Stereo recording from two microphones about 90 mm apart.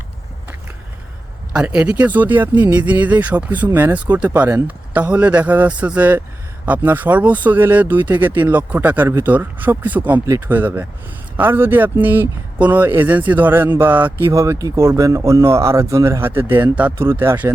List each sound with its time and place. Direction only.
1.5 s speech: 10° right (ahead or behind)
14.3 s speech: 35° right (ahead or behind)